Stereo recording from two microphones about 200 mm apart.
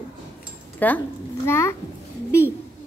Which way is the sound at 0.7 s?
10° left (ahead or behind).